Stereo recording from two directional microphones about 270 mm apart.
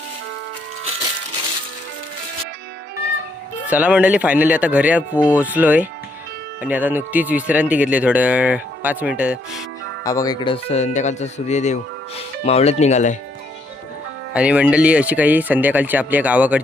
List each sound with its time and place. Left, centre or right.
3.7 s speech: centre
10.0 s speech: centre
14.3 s speech: centre